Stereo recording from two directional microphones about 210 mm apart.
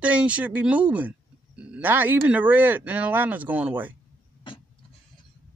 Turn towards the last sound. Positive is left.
turn(degrees=25)  # may be behind; listen again after turning